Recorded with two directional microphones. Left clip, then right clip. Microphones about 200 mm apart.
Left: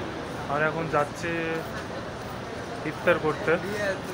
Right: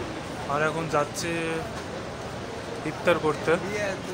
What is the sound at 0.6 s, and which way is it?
Speech, 10° right (ahead or behind).